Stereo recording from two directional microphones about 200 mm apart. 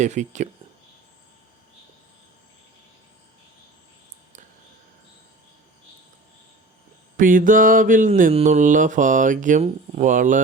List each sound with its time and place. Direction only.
0.0 s speech: 35° right (ahead or behind)
7.2 s speech: 40° right (ahead or behind)